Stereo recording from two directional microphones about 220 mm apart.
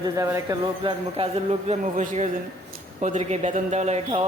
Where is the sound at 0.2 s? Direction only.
15° right (ahead or behind).